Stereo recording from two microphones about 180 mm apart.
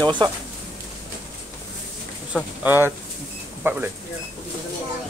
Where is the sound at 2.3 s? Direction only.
10° right (ahead or behind).